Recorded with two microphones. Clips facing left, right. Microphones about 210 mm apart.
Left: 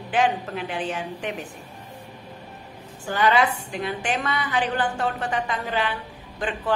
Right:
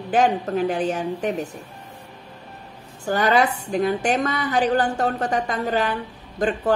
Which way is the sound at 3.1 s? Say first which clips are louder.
Right 2 dB; 40° right (ahead or behind).